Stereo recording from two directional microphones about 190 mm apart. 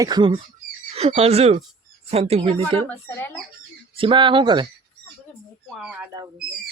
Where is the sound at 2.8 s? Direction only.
10° left (ahead or behind).